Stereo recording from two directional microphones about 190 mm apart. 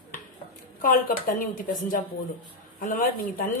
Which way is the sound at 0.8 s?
45° left (ahead or behind).